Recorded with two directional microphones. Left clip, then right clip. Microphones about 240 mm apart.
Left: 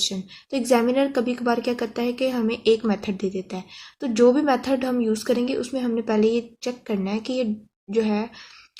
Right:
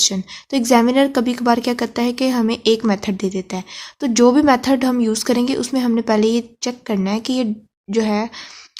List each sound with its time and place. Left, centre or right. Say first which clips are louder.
0.0 s a woman's voice: right 7 dB; right